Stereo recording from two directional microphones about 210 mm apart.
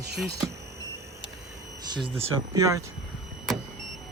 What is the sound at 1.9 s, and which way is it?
Speech, 25° right (ahead or behind).